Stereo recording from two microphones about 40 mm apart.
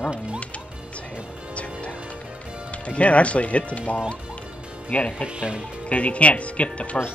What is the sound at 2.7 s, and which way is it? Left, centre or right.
Speech, left.